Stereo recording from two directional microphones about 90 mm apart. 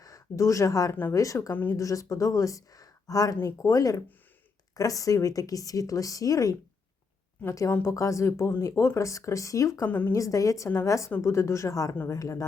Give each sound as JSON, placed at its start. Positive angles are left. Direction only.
{"t": 0.0, "sound": "speech", "side_deg": 35}
{"t": 9.8, "sound": "a woman's voice", "side_deg": 20}
{"t": 10.1, "sound": "speech", "side_deg": 35}